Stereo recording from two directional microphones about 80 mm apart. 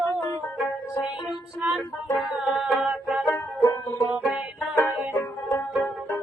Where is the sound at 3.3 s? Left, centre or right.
Left.